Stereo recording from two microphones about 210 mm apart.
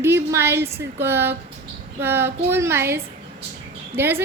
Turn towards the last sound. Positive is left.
turn(degrees=-10)  # may be behind; listen again after turning